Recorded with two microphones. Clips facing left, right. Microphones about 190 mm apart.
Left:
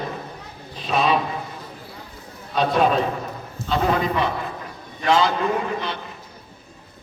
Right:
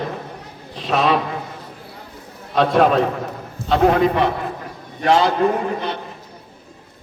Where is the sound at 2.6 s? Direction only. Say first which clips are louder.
Right 4 dB; 75° right (ahead or behind); by 6.0 s 45° right (ahead or behind).